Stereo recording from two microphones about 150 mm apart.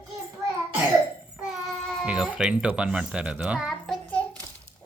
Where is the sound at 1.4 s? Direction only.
5° right (ahead or behind).